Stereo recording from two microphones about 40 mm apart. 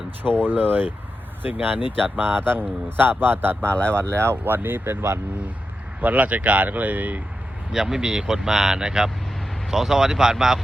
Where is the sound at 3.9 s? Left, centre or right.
Right.